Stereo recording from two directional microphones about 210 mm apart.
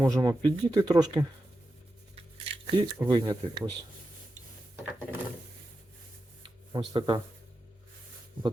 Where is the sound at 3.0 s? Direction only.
20° right (ahead or behind).